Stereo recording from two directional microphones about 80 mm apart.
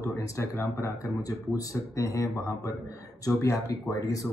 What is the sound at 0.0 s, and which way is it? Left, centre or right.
Speech, left.